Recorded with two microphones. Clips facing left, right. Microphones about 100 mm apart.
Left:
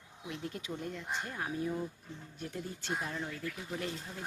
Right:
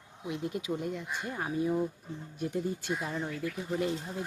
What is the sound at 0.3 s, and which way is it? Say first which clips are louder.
Speech: right 7 dB; 10° right (ahead or behind).